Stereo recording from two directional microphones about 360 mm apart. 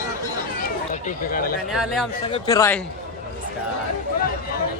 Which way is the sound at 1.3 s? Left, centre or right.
Left.